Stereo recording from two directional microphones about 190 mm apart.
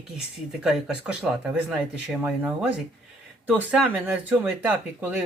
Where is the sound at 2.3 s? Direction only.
5° right (ahead or behind).